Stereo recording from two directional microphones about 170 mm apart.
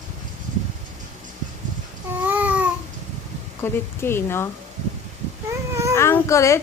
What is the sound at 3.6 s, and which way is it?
Child singing, 15° left (ahead or behind).